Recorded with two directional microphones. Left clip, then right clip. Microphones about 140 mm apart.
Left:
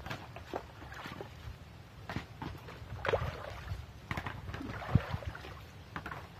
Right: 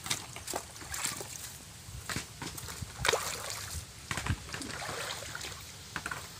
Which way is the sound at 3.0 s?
50° right (ahead or behind).